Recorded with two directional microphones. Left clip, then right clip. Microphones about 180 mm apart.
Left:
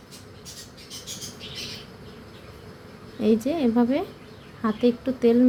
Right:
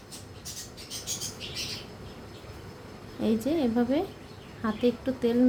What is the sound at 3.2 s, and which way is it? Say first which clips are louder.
Speech: left 5 dB; 15° left (ahead or behind).